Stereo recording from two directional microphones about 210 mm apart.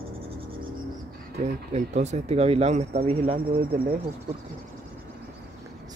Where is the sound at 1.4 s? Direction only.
35° right (ahead or behind).